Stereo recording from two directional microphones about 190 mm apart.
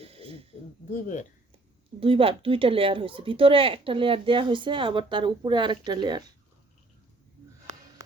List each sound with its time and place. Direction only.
0.0 s a sound: 30° right (ahead or behind)
0.9 s speech: 45° left (ahead or behind)
2.0 s speech: 30° right (ahead or behind)